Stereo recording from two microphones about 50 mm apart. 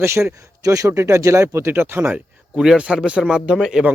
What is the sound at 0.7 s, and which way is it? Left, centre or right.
Speech, right.